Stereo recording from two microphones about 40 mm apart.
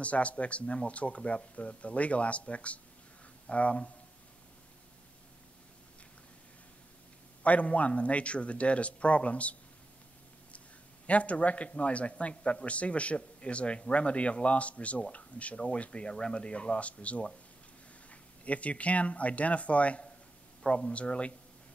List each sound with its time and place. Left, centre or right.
0.0 s a man's voice: left
7.4 s a man's voice: left
11.1 s a man's voice: left
20.6 s a man's voice: left